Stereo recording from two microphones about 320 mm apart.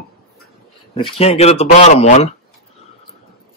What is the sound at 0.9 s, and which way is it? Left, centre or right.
Speech, centre.